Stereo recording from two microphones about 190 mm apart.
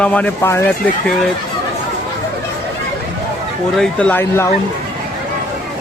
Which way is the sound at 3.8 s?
5° left (ahead or behind).